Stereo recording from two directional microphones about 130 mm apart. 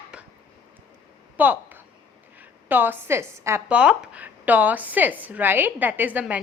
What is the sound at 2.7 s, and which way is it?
Speech, 15° right (ahead or behind).